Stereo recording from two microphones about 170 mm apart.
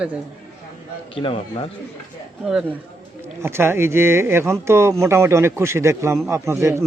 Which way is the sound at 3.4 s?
15° right (ahead or behind).